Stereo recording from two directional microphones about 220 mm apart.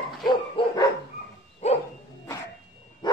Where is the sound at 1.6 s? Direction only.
30° left (ahead or behind).